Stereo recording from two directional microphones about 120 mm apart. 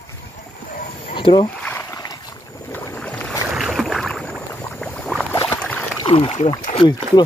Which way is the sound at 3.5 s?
Centre (ahead or behind).